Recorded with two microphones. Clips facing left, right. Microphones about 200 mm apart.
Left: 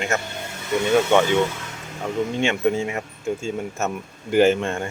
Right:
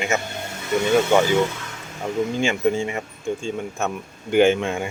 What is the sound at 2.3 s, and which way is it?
Speech, centre (ahead or behind).